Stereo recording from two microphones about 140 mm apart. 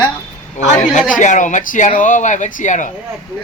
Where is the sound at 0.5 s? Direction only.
60° left (ahead or behind).